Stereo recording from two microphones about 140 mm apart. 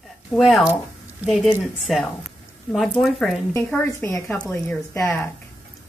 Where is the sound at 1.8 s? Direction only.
Centre (ahead or behind).